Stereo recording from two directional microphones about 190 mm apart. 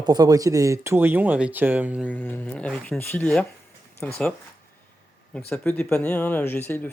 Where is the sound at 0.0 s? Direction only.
20° right (ahead or behind).